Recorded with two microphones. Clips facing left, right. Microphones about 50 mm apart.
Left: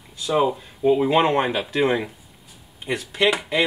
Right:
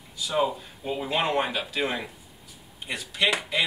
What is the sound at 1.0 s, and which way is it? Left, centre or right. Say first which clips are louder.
Speech: left 7 dB; left.